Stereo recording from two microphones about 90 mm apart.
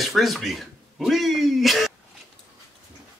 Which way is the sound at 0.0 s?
Centre (ahead or behind).